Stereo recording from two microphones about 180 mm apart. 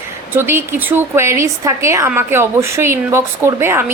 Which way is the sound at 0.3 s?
15° right (ahead or behind).